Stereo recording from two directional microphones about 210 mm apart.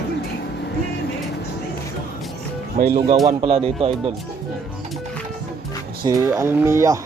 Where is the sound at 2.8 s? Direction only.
40° right (ahead or behind).